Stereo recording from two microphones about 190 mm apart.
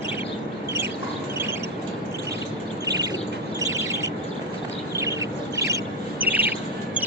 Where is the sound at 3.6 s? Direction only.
15° right (ahead or behind).